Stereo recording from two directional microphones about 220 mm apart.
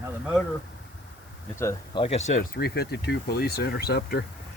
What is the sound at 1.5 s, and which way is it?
Speech, 15° left (ahead or behind).